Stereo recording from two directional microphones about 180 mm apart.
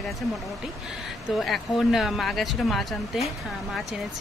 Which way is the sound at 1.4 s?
Centre (ahead or behind).